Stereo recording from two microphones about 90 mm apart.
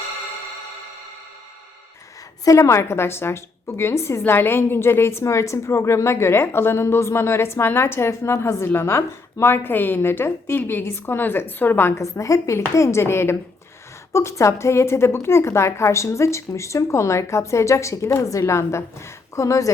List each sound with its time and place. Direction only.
2.4 s a woman's voice: 35° left (ahead or behind)